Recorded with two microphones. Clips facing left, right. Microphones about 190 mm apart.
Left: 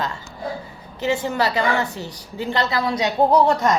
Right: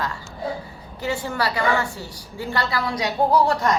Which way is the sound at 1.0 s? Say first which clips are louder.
Left 4 dB; 20° left (ahead or behind).